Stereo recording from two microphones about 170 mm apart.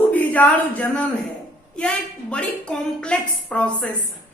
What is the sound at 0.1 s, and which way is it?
Speech, 10° left (ahead or behind).